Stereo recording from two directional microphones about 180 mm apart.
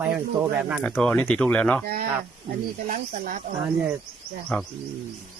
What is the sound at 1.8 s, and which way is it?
Speech, 60° right (ahead or behind).